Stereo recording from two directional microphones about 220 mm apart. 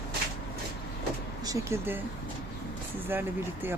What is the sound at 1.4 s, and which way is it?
Speech, 15° right (ahead or behind).